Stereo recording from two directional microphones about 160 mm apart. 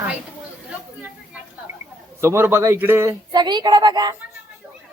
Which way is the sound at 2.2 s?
15° right (ahead or behind).